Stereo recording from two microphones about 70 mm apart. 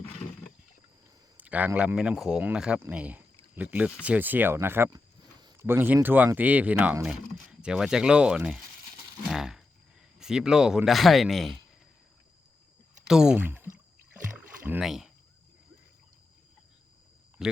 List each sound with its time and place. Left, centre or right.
1.4 s a man's voice: right
2.0 s speech: centre
2.4 s speech: centre; by 4.9 s right
4.9 s a sound: right
5.5 s speech: right
7.6 s speech: centre
9.3 s a sound: centre
10.2 s speech: centre
13.1 s speech: centre
13.4 s speech: right
14.3 s rowboat: right
14.8 s speech: centre
17.4 s speech: centre